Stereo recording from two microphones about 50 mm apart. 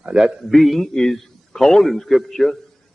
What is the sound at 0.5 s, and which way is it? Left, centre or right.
A man's voice, centre.